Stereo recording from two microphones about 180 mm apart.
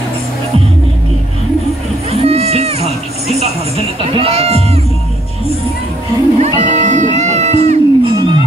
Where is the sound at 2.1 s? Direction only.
35° right (ahead or behind).